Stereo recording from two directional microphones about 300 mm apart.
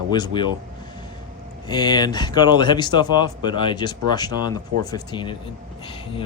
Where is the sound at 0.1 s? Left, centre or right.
Centre.